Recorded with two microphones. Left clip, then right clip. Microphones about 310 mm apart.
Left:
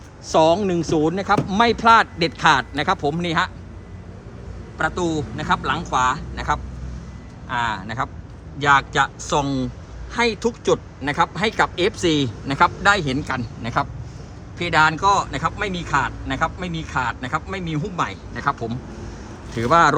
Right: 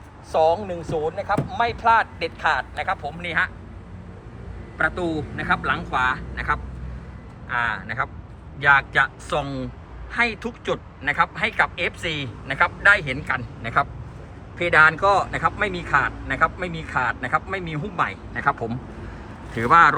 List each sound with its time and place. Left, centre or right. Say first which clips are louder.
0.3 s speech: left 3 dB; left
4.8 s speech: left 1 dB; centre